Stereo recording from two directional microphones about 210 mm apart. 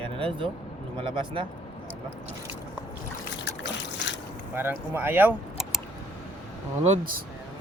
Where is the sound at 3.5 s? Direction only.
55° left (ahead or behind).